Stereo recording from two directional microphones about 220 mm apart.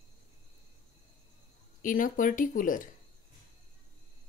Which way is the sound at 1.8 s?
40° left (ahead or behind).